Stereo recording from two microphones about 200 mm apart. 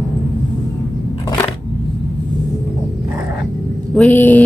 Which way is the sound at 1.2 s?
20° left (ahead or behind).